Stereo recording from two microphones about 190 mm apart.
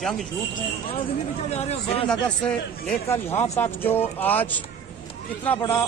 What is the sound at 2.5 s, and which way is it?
A man's voice, 10° left (ahead or behind).